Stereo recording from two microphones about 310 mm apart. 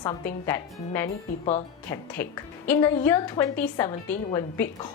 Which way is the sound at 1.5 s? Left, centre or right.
Left.